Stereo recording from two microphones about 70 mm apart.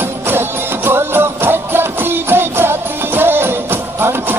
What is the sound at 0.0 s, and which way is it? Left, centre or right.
Music, right.